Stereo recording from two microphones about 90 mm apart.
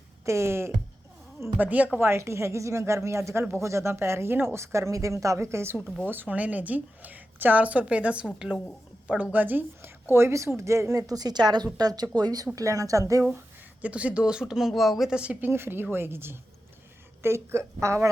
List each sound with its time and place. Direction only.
0.3 s a woman's voice: 30° right (ahead or behind)
1.5 s speech: 15° right (ahead or behind)
2.0 s speech: 30° right (ahead or behind)
6.1 s a woman's voice: 20° right (ahead or behind); by 13.2 s 40° right (ahead or behind)
13.8 s speech: 15° right (ahead or behind); by 18.1 s 35° right (ahead or behind)